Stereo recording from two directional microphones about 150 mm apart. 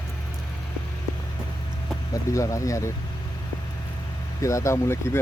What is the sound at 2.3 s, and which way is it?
Speech, 20° left (ahead or behind).